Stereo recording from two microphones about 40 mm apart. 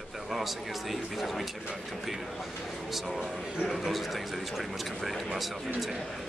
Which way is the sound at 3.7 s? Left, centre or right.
Centre.